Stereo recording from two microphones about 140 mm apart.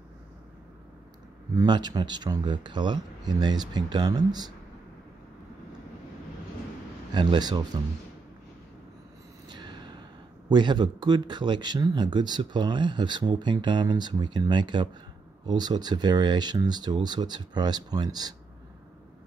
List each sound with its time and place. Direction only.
1.5 s speech: 30° right (ahead or behind)
7.2 s speech: 30° right (ahead or behind)
9.5 s a sound: 30° right (ahead or behind)
10.5 s speech: 30° right (ahead or behind)